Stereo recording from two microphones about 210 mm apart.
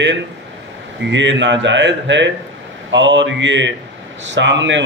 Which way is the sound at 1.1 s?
60° right (ahead or behind).